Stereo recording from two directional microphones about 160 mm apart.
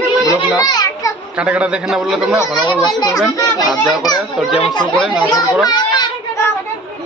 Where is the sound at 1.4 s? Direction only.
10° right (ahead or behind).